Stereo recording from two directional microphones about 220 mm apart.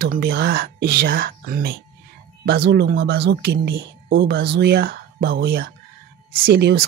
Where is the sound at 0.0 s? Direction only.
45° right (ahead or behind).